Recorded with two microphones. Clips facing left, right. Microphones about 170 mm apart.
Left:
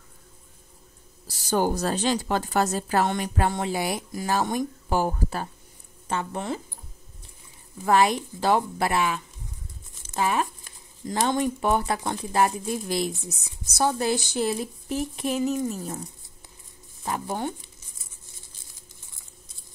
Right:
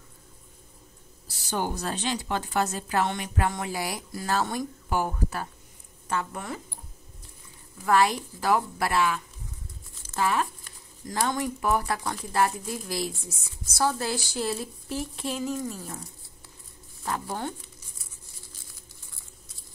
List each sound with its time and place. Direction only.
1.2 s speech: 40° left (ahead or behind); by 4.6 s 15° left (ahead or behind)
4.8 s speech: 30° left (ahead or behind)
7.8 s speech: 20° left (ahead or behind)